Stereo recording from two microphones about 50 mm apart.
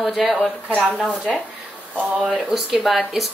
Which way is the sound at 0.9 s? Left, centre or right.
Centre.